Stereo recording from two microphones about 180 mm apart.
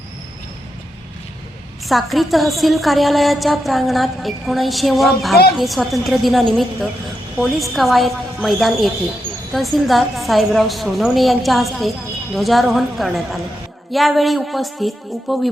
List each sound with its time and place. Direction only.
1.9 s a woman's voice: centre (ahead or behind)